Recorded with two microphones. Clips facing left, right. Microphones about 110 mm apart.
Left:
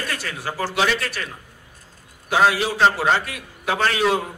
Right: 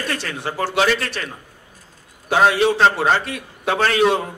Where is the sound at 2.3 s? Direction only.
25° right (ahead or behind).